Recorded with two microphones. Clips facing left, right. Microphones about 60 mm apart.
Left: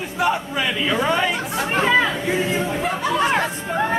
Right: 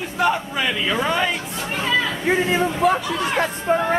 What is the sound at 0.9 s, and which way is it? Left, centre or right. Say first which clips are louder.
Chatter: left 2 dB; centre.